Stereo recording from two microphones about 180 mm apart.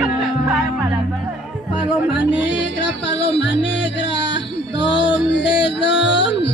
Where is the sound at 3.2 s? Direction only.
75° left (ahead or behind).